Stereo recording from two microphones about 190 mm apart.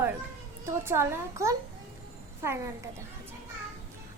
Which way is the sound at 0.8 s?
15° right (ahead or behind).